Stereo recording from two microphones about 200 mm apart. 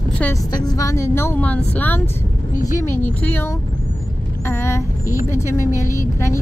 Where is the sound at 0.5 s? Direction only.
20° left (ahead or behind).